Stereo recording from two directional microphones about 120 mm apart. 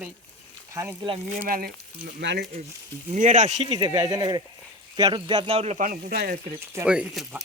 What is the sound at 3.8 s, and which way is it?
Speech, 30° right (ahead or behind).